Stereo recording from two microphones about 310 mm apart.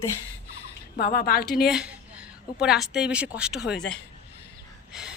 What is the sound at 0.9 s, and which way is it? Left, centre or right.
Speech, left.